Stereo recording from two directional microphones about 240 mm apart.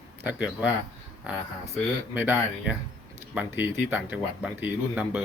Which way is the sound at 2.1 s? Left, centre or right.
Centre.